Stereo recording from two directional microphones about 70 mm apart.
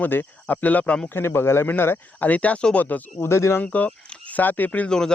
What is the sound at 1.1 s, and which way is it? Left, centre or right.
Speech, left.